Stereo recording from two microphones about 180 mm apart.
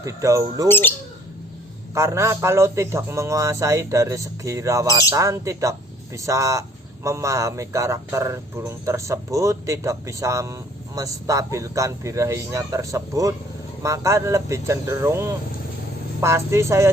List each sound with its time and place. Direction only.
0.0 s speech: 15° right (ahead or behind)
0.7 s speech: 10° left (ahead or behind)
2.0 s speech: 15° right (ahead or behind)